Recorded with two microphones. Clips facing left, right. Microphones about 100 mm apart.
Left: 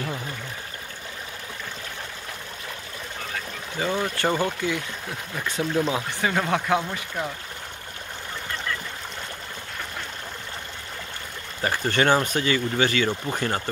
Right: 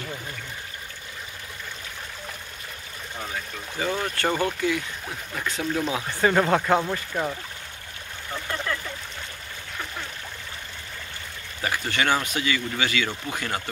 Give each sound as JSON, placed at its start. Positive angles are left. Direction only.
{"t": 3.8, "sound": "speech", "side_deg": 20}
{"t": 6.2, "sound": "speech", "side_deg": 0}
{"t": 11.6, "sound": "speech", "side_deg": 40}